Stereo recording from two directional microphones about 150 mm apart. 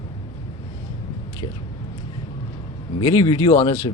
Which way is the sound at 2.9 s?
30° left (ahead or behind).